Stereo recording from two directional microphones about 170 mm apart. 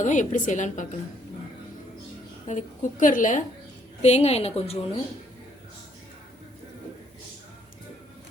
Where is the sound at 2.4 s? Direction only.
50° left (ahead or behind).